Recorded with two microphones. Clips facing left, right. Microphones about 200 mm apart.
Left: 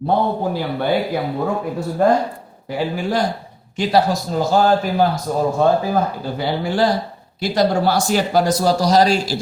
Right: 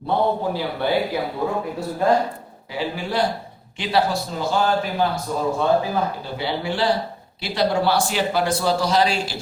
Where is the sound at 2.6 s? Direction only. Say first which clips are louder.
Left 5 dB; 45° left (ahead or behind).